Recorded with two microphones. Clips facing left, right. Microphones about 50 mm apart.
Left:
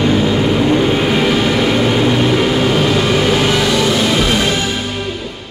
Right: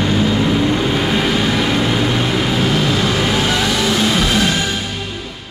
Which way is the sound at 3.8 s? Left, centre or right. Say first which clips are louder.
Left 2 dB; centre.